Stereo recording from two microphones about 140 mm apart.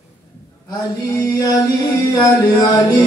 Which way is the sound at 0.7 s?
25° left (ahead or behind).